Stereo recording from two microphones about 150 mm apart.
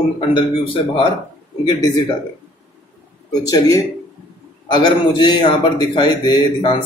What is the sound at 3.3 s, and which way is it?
A man's voice, 25° left (ahead or behind).